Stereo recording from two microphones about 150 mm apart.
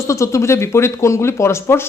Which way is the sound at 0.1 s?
20° left (ahead or behind).